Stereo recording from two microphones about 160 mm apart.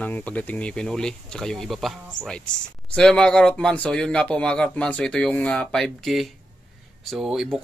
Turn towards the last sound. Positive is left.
turn(degrees=-5)  # may be behind; listen again after turning